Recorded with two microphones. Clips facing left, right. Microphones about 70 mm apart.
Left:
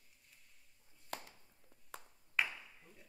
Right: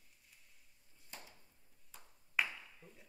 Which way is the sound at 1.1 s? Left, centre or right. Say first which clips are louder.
Left 8 dB; left.